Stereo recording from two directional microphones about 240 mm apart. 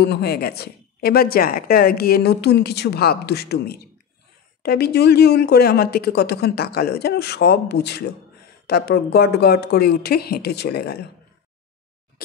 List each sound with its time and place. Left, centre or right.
0.0 s a woman's voice: left